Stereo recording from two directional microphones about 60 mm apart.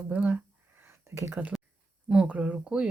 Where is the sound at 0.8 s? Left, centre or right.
Right.